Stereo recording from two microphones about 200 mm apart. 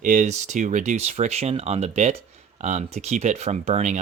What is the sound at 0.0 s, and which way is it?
Speech, 35° right (ahead or behind).